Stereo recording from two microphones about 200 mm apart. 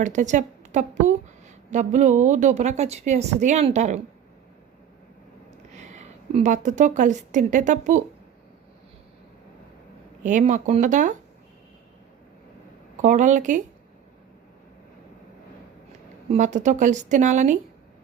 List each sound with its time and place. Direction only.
0.0 s a woman's voice: 40° right (ahead or behind)
5.7 s a woman's voice: 35° right (ahead or behind)
10.2 s a woman's voice: 40° right (ahead or behind)
13.0 s a woman's voice: 35° right (ahead or behind)
16.3 s a woman's voice: 35° right (ahead or behind)